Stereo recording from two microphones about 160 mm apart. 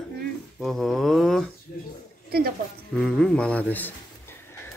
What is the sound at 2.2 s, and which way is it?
Speech, 75° right (ahead or behind).